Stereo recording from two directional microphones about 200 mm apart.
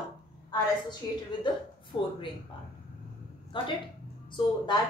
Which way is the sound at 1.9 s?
25° left (ahead or behind).